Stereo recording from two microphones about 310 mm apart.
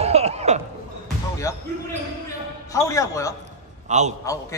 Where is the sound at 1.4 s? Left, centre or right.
Centre.